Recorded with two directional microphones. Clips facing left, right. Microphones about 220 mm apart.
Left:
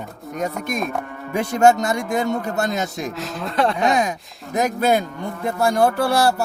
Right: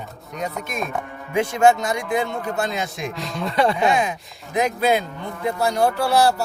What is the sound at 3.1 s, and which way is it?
Speech, 5° left (ahead or behind).